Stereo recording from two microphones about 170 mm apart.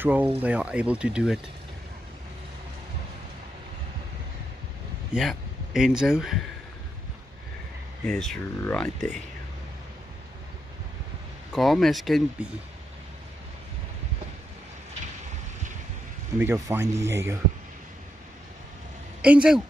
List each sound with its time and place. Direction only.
0.0 s speech: 10° right (ahead or behind)
5.1 s speech: centre (ahead or behind)
8.1 s speech: 5° left (ahead or behind)
11.5 s speech: centre (ahead or behind)
16.3 s speech: 15° right (ahead or behind)
19.2 s speech: 5° right (ahead or behind)